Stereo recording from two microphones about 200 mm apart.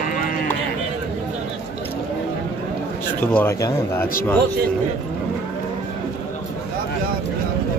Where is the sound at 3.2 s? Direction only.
10° left (ahead or behind).